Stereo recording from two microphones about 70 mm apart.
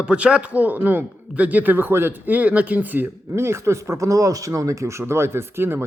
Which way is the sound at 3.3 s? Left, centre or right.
Right.